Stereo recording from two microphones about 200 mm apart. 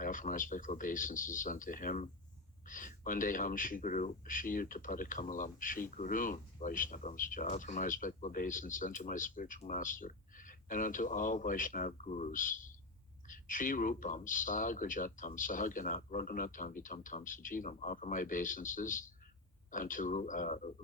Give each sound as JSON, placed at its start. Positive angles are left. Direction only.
{"t": 0.0, "sound": "speech", "side_deg": 40}